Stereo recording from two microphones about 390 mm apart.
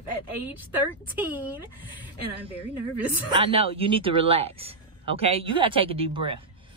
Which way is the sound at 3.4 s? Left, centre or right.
Centre.